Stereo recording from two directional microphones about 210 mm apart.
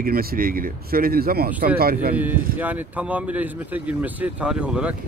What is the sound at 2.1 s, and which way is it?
Speech, 10° right (ahead or behind).